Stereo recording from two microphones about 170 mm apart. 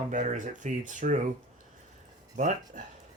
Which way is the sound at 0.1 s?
45° right (ahead or behind).